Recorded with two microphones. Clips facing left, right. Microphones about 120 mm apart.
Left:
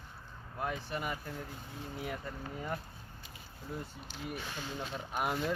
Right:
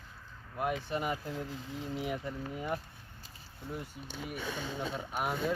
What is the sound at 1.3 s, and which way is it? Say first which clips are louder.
Speech: right 5 dB; 90° right.